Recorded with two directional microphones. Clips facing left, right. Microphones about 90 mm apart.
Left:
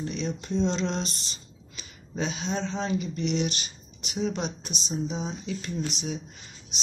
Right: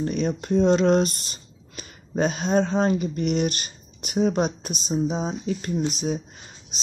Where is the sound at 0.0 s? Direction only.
50° right (ahead or behind).